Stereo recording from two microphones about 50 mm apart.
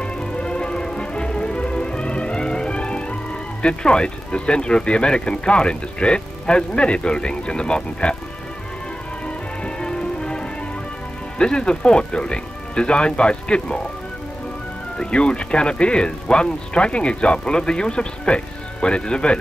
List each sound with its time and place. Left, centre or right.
0.0 s music: centre
3.6 s speech: centre
9.8 s music: centre
11.3 s speech: centre
15.0 s speech: centre